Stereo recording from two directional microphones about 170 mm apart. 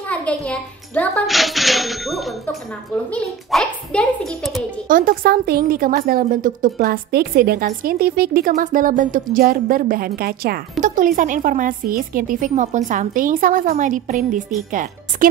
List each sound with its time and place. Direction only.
0.1 s a child's voice: 10° left (ahead or behind)
4.8 s a woman's voice: 55° right (ahead or behind)
10.8 s speech: 50° right (ahead or behind)